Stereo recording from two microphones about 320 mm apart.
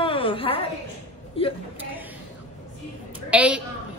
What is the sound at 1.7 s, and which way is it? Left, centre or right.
Speech, centre.